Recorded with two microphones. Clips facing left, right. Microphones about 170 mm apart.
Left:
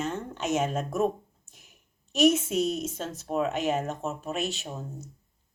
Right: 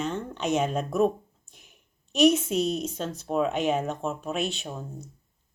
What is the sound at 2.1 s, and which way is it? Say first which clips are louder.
Speech: right 2 dB; 5° left (ahead or behind).